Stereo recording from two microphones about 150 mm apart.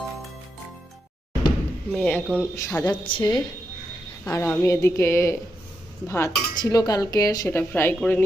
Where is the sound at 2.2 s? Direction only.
5° right (ahead or behind).